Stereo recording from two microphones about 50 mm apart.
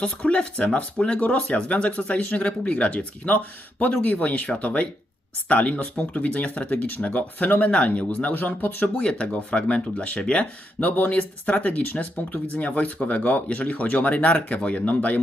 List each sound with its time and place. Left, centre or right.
0.0 s speech: left
9.0 s speech: centre